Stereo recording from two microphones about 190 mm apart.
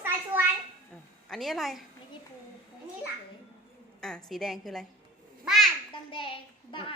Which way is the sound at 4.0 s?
5° left (ahead or behind).